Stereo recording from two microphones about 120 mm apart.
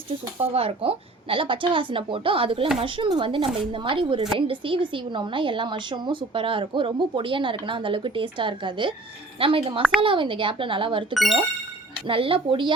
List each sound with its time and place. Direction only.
0.5 s a woman's voice: 55° right (ahead or behind)
11.1 s speech: centre (ahead or behind)
12.0 s a woman's voice: 50° right (ahead or behind)